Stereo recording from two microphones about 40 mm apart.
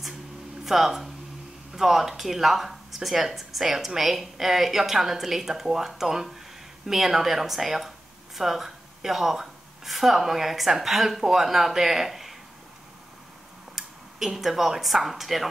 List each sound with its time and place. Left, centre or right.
0.7 s a woman's voice: centre
13.7 s speech: centre